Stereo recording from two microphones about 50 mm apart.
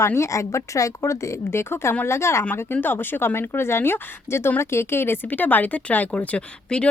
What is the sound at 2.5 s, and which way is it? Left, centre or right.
Speech, left.